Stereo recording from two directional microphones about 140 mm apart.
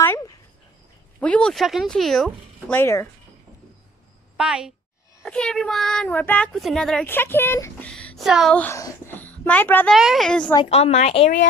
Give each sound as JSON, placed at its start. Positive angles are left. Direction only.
{"t": 1.2, "sound": "speech", "side_deg": 5}
{"t": 2.8, "sound": "speech", "side_deg": 20}
{"t": 4.4, "sound": "a woman's voice", "side_deg": -5}
{"t": 5.2, "sound": "a child's voice", "side_deg": 5}
{"t": 7.9, "sound": "a sound", "side_deg": 5}
{"t": 8.3, "sound": "speech", "side_deg": -5}
{"t": 8.5, "sound": "a child's voice", "side_deg": 20}
{"t": 9.9, "sound": "speech", "side_deg": 0}
{"t": 10.7, "sound": "a woman's voice", "side_deg": 45}